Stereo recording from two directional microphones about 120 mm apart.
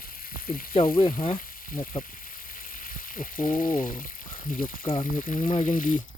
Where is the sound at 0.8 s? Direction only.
50° left (ahead or behind).